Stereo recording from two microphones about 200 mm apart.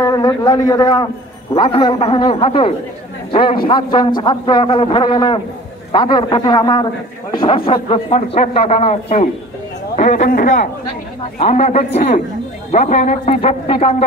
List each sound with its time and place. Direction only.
0.0 s a man's voice: 20° left (ahead or behind)